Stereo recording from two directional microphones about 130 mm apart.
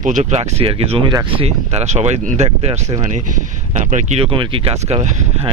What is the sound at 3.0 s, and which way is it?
Speech, 75° right (ahead or behind).